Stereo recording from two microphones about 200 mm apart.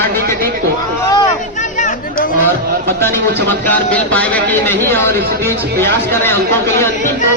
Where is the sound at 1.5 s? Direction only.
40° left (ahead or behind).